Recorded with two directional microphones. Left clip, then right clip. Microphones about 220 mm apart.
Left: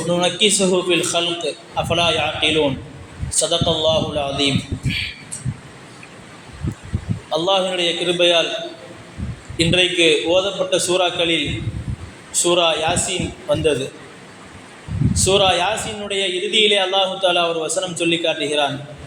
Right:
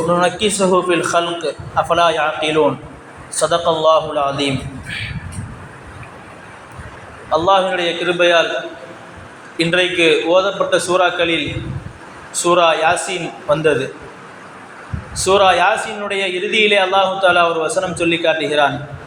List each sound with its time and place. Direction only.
0.1 s a man's voice: 5° left (ahead or behind)
7.3 s a man's voice: 5° left (ahead or behind)
9.6 s a man's voice: 5° left (ahead or behind)
15.1 s a man's voice: 5° left (ahead or behind)